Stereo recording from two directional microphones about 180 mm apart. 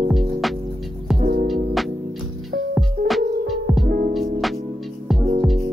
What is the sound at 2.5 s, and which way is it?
Music, 75° right (ahead or behind).